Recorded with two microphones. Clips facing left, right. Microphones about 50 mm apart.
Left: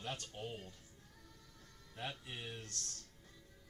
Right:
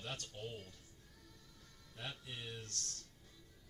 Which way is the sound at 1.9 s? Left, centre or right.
Left.